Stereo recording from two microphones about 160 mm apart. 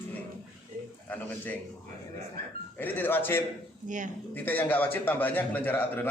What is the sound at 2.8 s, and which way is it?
Speech, 10° left (ahead or behind).